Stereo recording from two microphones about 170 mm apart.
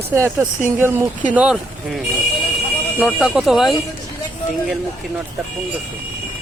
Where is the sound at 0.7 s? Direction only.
10° right (ahead or behind).